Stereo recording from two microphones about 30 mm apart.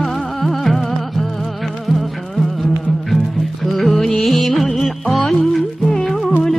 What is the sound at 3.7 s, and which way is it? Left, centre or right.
Music, centre.